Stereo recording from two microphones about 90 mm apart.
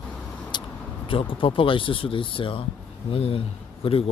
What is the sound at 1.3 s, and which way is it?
Speech, 75° left (ahead or behind).